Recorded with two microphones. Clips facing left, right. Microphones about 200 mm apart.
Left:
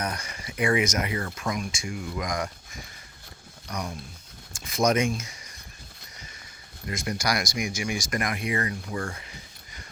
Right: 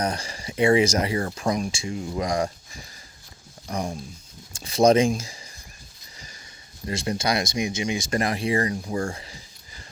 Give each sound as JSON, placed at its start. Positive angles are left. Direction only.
{"t": 0.0, "sound": "speech", "side_deg": -30}
{"t": 3.7, "sound": "speech", "side_deg": -30}
{"t": 6.8, "sound": "speech", "side_deg": -30}